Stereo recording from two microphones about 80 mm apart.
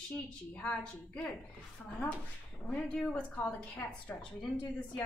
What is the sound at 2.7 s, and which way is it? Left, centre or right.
A woman's voice, centre.